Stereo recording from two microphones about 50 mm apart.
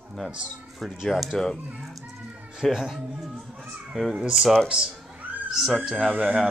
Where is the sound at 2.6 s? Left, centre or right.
Centre.